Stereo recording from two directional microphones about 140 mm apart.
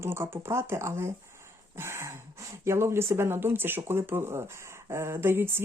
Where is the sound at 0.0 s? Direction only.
20° right (ahead or behind).